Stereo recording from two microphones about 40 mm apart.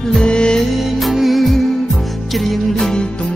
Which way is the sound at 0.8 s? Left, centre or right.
Centre.